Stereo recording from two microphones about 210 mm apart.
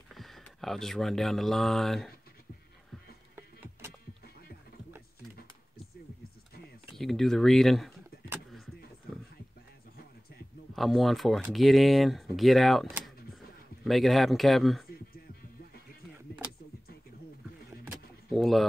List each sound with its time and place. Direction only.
0.1 s speech: centre (ahead or behind)
3.3 s music: 10° right (ahead or behind)
7.0 s speech: centre (ahead or behind)
10.7 s speech: centre (ahead or behind)
12.8 s a sound: 5° right (ahead or behind)
13.8 s speech: centre (ahead or behind)
18.3 s speech: centre (ahead or behind)